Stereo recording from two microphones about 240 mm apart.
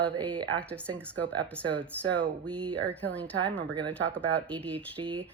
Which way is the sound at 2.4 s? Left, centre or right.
Centre.